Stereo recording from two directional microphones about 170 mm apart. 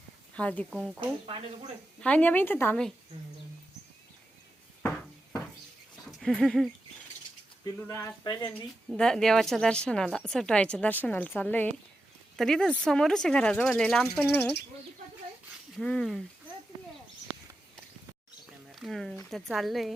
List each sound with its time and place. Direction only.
0.3 s a woman's voice: 10° left (ahead or behind)
0.9 s speech: 35° right (ahead or behind)
2.0 s a woman's voice: 10° left (ahead or behind)
6.1 s a sound: centre (ahead or behind)
7.8 s a woman's voice: 15° left (ahead or behind)
8.9 s a woman's voice: 5° left (ahead or behind)
15.8 s a woman's voice: 5° left (ahead or behind)
18.7 s a woman's voice: centre (ahead or behind)